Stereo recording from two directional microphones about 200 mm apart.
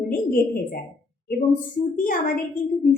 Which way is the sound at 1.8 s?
45° left (ahead or behind).